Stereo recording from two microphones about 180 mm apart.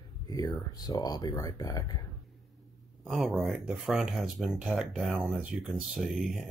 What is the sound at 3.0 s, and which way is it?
Speech, centre (ahead or behind).